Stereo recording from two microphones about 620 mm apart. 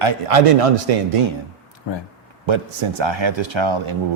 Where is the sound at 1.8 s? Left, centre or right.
Left.